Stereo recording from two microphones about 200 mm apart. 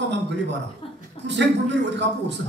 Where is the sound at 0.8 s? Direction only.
25° left (ahead or behind).